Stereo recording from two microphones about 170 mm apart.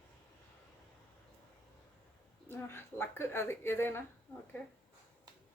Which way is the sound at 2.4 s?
15° left (ahead or behind).